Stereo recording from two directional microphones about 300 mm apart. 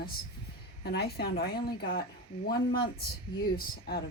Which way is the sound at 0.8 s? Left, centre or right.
Left.